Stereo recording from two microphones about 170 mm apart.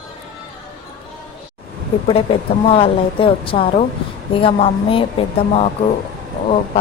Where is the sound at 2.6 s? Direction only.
35° left (ahead or behind).